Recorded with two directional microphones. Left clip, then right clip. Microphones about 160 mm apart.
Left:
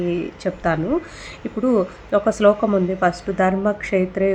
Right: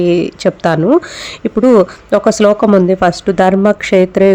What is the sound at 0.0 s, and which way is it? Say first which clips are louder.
Speech: right 11 dB; 75° right (ahead or behind).